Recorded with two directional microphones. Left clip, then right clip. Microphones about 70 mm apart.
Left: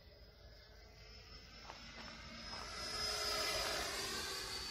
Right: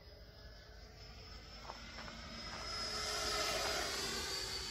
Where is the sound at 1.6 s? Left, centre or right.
Left; by 4.6 s centre.